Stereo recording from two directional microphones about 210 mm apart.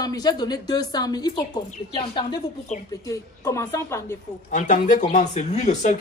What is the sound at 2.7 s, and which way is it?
Speech, 35° left (ahead or behind).